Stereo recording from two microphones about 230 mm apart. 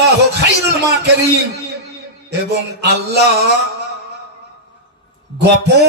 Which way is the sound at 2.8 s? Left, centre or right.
Right.